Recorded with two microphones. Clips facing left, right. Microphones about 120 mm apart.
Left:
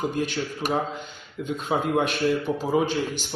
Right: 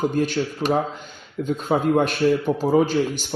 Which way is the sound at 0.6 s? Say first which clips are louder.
Right 5 dB; 20° right (ahead or behind).